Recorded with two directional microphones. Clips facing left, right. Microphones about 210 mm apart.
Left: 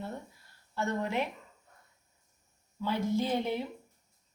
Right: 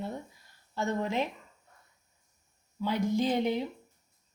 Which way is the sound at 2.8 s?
15° right (ahead or behind).